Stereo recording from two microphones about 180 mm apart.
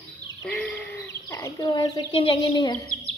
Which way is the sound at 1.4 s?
25° left (ahead or behind).